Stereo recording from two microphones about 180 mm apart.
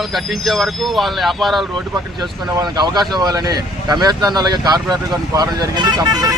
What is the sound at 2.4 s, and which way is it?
Speech, 20° right (ahead or behind).